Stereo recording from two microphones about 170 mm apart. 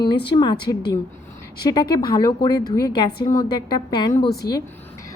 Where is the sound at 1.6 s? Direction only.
25° left (ahead or behind).